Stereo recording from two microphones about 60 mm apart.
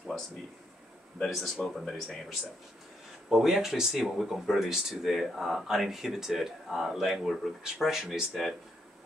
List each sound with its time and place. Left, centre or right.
1.2 s speech: centre